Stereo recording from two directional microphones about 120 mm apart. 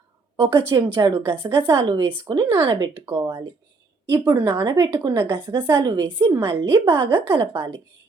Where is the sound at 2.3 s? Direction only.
40° right (ahead or behind).